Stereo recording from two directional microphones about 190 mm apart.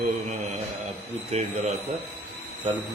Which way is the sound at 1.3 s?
35° right (ahead or behind).